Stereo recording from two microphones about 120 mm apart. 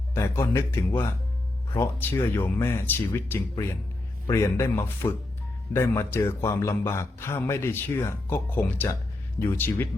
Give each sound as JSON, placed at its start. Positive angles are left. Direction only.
{"t": 0.1, "sound": "a man's voice", "side_deg": 20}